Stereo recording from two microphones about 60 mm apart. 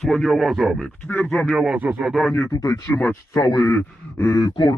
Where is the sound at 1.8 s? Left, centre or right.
Right.